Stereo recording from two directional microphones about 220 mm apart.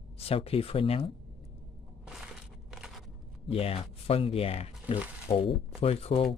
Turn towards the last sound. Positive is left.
turn(degrees=25)  # may be behind; listen again after turning